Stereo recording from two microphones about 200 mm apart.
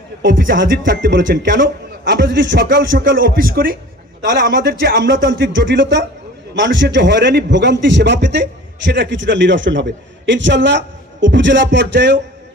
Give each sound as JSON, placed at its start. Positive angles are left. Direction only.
{"t": 0.3, "sound": "speech", "side_deg": -45}
{"t": 0.5, "sound": "a man's voice", "side_deg": -70}
{"t": 2.6, "sound": "speech", "side_deg": -45}
{"t": 4.9, "sound": "a man's voice", "side_deg": -65}